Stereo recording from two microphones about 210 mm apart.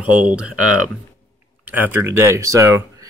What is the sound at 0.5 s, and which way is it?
Speech, 90° right.